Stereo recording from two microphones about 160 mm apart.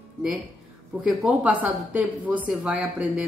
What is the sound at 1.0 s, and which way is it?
Speech, 10° right (ahead or behind).